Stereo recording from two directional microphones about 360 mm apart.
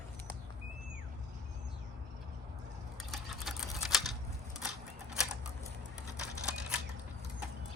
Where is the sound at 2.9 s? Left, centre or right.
Centre.